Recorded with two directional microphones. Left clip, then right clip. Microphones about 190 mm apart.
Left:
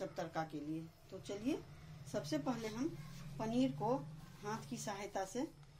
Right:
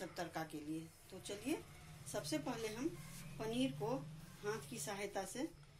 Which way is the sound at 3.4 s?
60° left (ahead or behind).